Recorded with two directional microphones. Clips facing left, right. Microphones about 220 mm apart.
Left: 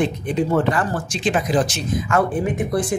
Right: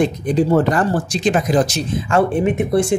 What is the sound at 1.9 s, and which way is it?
Speech, 30° right (ahead or behind).